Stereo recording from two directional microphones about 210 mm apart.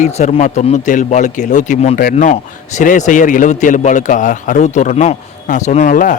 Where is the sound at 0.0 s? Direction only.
35° left (ahead or behind).